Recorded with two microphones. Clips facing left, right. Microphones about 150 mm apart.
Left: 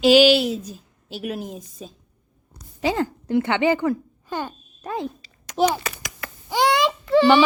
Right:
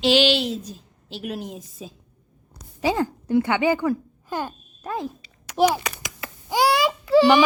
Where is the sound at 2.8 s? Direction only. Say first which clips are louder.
Even; 15° right (ahead or behind).